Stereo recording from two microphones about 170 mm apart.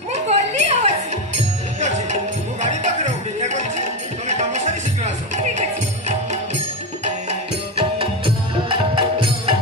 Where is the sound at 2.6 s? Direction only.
45° right (ahead or behind).